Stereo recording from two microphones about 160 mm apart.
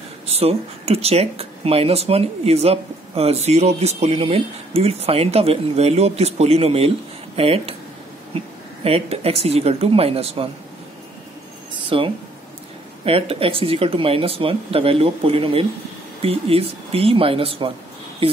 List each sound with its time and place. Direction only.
0.3 s speech: 40° right (ahead or behind)
8.8 s speech: 40° right (ahead or behind)
11.9 s speech: 35° right (ahead or behind)